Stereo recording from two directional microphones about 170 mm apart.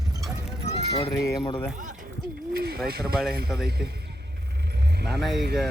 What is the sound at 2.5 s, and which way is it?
Speech, 65° right (ahead or behind).